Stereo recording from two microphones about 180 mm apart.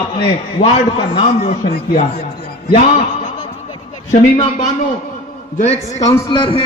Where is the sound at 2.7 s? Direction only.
45° left (ahead or behind).